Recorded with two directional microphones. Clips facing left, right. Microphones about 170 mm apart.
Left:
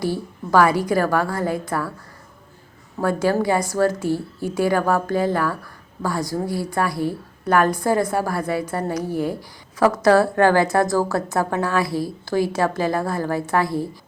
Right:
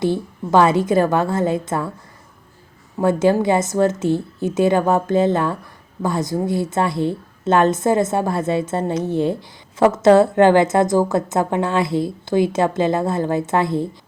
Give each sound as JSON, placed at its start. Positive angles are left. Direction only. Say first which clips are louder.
{"t": 0.0, "sound": "a woman's voice", "louder": "right 4 dB", "side_deg": -20}
{"t": 3.0, "sound": "a woman's voice", "louder": "right 4 dB", "side_deg": -20}